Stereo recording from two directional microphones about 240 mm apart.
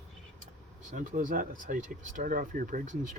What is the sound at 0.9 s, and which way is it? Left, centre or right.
Speech, right.